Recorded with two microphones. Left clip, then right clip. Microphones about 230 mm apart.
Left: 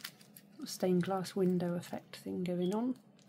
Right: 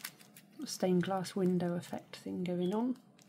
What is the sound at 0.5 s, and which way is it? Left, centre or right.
Speech, centre.